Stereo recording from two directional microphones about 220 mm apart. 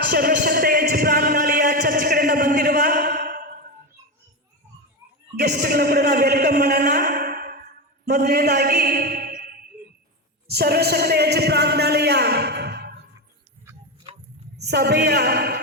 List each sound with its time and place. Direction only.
0.1 s a sound: 40° right (ahead or behind)
5.4 s a man's voice: 50° right (ahead or behind)
10.5 s a man's voice: 45° right (ahead or behind)
14.5 s a man's voice: 50° right (ahead or behind)